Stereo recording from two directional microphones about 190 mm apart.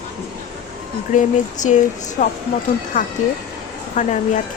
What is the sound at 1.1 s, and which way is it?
A woman's voice, 40° left (ahead or behind).